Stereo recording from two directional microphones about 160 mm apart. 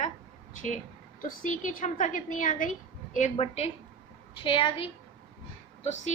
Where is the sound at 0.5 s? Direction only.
50° left (ahead or behind); by 4.9 s 30° left (ahead or behind).